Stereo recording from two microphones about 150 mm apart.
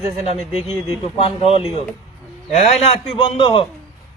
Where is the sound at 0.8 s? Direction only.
40° left (ahead or behind).